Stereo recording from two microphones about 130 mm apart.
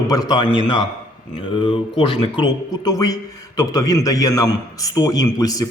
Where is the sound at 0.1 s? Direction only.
30° left (ahead or behind).